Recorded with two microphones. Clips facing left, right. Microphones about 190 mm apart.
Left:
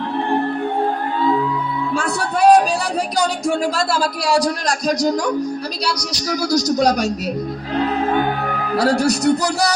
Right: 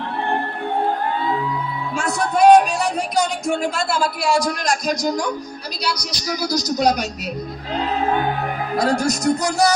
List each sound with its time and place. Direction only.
2.0 s music: 35° left (ahead or behind)
3.2 s speech: 35° left (ahead or behind)
6.0 s speech: 85° left
6.7 s speech: 40° left (ahead or behind)
8.7 s speech: 70° left (ahead or behind)